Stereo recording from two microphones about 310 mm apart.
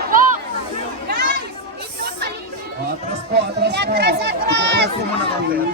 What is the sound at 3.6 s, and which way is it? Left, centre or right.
Run, right.